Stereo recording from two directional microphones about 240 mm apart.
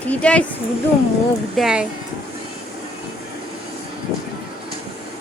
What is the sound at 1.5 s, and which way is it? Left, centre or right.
Speech, centre.